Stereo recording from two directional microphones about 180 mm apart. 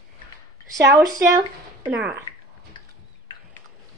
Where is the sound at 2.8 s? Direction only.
25° left (ahead or behind).